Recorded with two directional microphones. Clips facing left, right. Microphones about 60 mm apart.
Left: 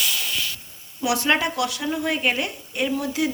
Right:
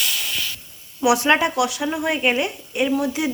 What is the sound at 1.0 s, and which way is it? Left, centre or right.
Speech, centre.